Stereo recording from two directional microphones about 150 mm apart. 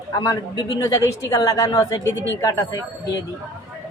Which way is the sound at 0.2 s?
25° left (ahead or behind).